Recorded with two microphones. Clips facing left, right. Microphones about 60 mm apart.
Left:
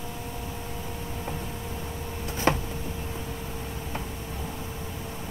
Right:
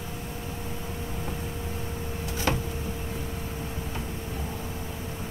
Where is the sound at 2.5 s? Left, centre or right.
Left.